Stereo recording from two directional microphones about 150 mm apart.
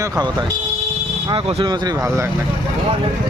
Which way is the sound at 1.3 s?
40° right (ahead or behind).